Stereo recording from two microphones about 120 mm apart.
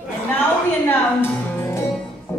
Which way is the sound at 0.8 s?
15° left (ahead or behind).